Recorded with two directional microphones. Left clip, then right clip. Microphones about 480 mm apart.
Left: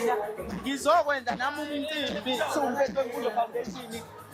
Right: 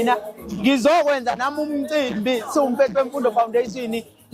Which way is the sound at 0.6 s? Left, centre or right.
Right.